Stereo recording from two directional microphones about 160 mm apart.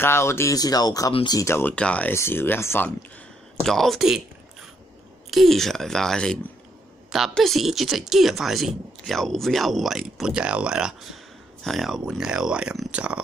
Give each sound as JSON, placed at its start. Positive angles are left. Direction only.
{"t": 0.0, "sound": "speech", "side_deg": 15}
{"t": 3.6, "sound": "speech", "side_deg": 0}
{"t": 5.3, "sound": "speech", "side_deg": 0}